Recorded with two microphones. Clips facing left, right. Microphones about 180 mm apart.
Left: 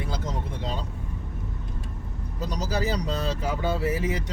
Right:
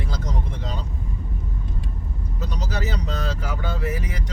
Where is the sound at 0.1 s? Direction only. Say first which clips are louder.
Even; 25° left (ahead or behind).